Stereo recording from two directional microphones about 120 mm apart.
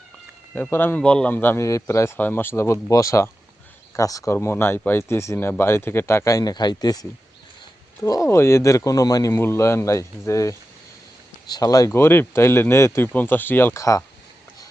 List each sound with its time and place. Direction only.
0.5 s a man's voice: 15° left (ahead or behind)
9.3 s speech: 20° left (ahead or behind)
11.9 s speech: 20° left (ahead or behind)